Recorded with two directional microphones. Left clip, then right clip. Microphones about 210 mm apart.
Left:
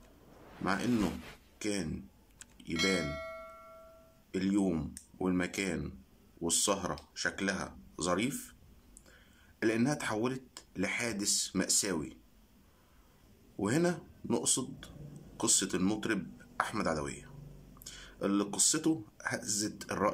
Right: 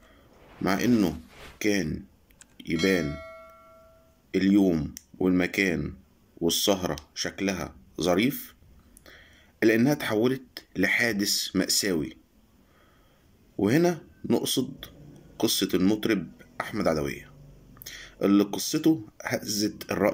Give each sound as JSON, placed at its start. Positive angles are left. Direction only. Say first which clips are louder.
{"t": 0.7, "sound": "speech", "louder": "right 8 dB", "side_deg": -5}
{"t": 2.5, "sound": "music", "louder": "right 7 dB", "side_deg": -5}
{"t": 4.3, "sound": "speech", "louder": "right 10 dB", "side_deg": -5}
{"t": 9.0, "sound": "a sound", "louder": "right 12 dB", "side_deg": -5}
{"t": 10.5, "sound": "speech", "louder": "right 11 dB", "side_deg": -5}
{"t": 13.6, "sound": "speech", "louder": "right 8 dB", "side_deg": -5}
{"t": 17.8, "sound": "a sound", "louder": "right 8 dB", "side_deg": 50}
{"t": 18.2, "sound": "speech", "louder": "right 8 dB", "side_deg": -10}